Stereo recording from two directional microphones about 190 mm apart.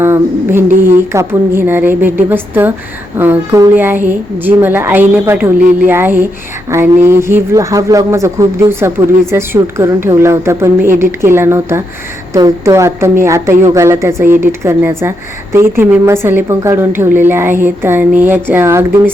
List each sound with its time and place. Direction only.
0.0 s a woman's voice: 10° right (ahead or behind)